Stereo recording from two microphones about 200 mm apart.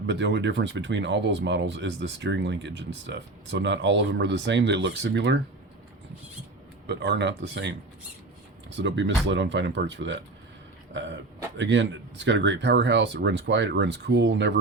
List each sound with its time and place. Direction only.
0.1 s speech: 60° right (ahead or behind)
6.8 s speech: 55° right (ahead or behind)
11.5 s speech: 60° right (ahead or behind)